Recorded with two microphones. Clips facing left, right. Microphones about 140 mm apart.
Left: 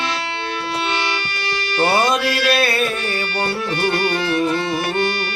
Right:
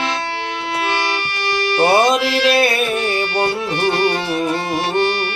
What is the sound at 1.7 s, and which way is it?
Music, 25° right (ahead or behind).